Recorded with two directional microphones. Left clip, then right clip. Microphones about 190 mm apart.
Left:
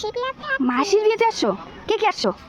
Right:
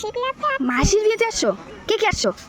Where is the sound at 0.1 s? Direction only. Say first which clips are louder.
Right 2 dB; 5° left (ahead or behind).